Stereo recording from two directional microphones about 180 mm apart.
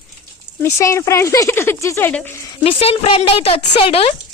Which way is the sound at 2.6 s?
35° left (ahead or behind).